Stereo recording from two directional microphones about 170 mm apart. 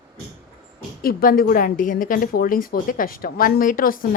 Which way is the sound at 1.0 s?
60° left (ahead or behind).